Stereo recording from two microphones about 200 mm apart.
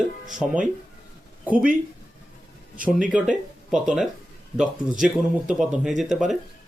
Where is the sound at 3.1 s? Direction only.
5° right (ahead or behind).